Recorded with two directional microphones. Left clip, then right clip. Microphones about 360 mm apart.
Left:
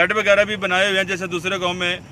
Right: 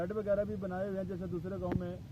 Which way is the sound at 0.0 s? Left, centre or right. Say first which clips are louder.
Left 18 dB; centre.